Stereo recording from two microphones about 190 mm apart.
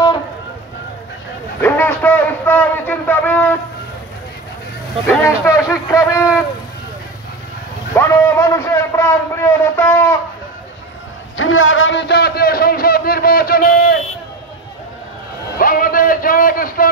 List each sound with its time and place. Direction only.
1.6 s a sound: 10° left (ahead or behind)
5.0 s speech: 15° left (ahead or behind)
7.9 s a man's voice: 15° left (ahead or behind)
11.3 s a man's voice: 90° left; by 13.9 s 50° left (ahead or behind)
15.6 s speech: 45° left (ahead or behind)